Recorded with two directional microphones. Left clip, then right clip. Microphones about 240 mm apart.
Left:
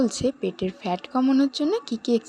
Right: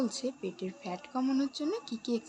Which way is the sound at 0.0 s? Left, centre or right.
Left.